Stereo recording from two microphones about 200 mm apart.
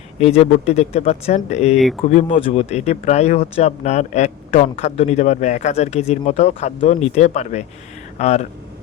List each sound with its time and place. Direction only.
0.2 s speech: 30° left (ahead or behind)
1.7 s speech: centre (ahead or behind)
2.0 s speech: 30° left (ahead or behind)